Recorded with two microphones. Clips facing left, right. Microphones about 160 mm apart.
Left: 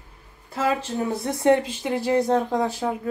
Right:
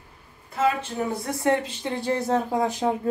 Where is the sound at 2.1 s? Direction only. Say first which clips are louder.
Left 3 dB; 5° right (ahead or behind).